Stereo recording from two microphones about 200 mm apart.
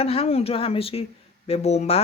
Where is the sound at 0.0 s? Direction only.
30° left (ahead or behind).